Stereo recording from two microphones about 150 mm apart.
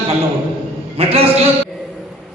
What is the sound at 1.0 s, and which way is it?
Speech, 40° right (ahead or behind).